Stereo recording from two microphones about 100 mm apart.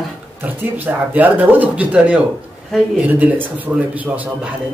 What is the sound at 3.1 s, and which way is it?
A woman's voice, 15° right (ahead or behind).